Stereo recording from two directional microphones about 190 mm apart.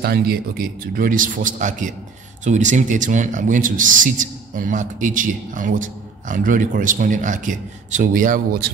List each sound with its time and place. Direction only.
0.0 s a man's voice: 55° right (ahead or behind)